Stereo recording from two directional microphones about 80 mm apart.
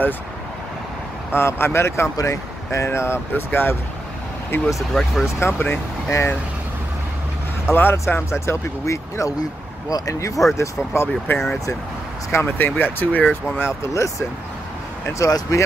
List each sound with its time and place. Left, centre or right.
1.3 s speech: left
4.9 s speech: centre
5.4 s speech: left
6.0 s speech: left
7.7 s speech: left
13.6 s speech: left
15.1 s speech: left